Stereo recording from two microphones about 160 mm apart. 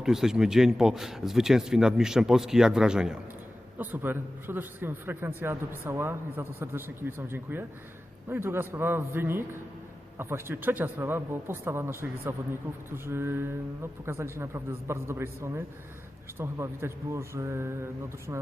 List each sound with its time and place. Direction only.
0.0 s a man's voice: 5° right (ahead or behind)